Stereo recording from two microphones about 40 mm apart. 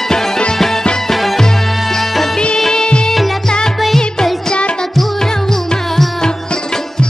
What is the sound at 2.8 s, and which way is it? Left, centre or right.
Music, left.